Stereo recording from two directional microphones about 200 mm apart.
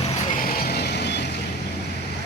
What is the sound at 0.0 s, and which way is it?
Vehicle, 40° left (ahead or behind).